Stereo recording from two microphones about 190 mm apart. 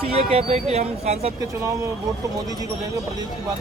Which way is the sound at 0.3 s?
35° right (ahead or behind).